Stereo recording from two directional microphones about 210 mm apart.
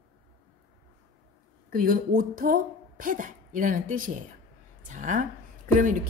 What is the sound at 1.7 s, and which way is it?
A woman's voice, 40° right (ahead or behind).